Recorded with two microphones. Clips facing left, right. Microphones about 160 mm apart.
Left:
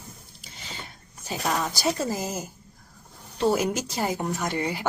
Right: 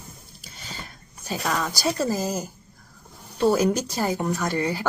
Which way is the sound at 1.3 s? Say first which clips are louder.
Right 1 dB; 20° left (ahead or behind).